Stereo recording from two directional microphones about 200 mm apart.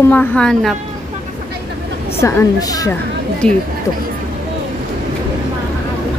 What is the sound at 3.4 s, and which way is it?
Speech, 5° left (ahead or behind).